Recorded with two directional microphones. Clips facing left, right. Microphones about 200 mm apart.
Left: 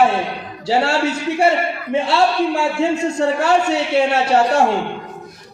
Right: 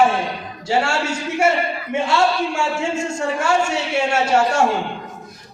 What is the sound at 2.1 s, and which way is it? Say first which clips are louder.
Speech: left 2 dB; 35° left (ahead or behind).